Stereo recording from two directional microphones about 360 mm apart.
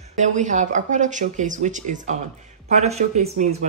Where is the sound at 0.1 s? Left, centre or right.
Centre.